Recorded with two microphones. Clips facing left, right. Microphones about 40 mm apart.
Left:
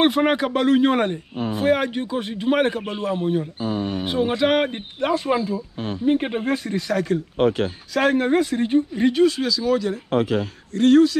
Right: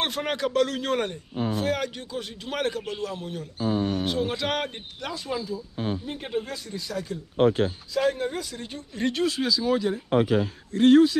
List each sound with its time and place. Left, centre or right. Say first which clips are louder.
0.0 s a man's voice: left 9 dB; left
3.6 s speech: left 1 dB; left
3.9 s a man's voice: left 4 dB; left
5.0 s speech: left 11 dB; left
8.9 s speech: left 2 dB; centre
9.5 s speech: left 3 dB; centre